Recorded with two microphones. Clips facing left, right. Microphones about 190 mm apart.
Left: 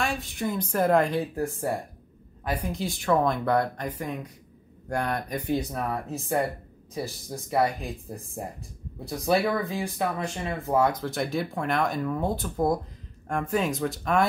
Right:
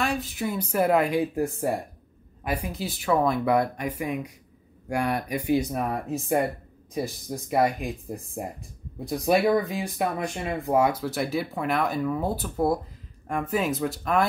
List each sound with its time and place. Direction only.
0.0 s speech: centre (ahead or behind)
9.0 s speech: 20° right (ahead or behind); by 14.2 s centre (ahead or behind)